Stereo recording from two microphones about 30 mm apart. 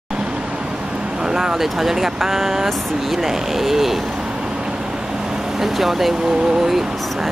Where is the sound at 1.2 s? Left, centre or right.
Centre.